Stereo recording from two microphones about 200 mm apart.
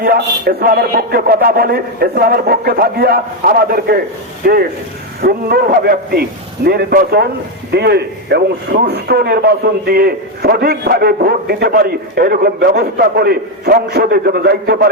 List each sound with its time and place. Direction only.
0.0 s speech: 50° right (ahead or behind)